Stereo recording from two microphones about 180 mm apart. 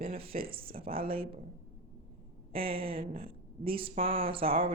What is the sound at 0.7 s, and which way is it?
Speech, 55° right (ahead or behind).